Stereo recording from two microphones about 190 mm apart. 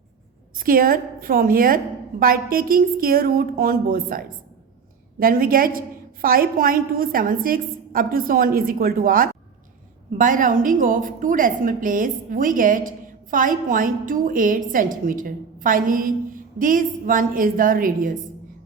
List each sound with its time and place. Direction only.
0.5 s a woman's voice: 50° right (ahead or behind)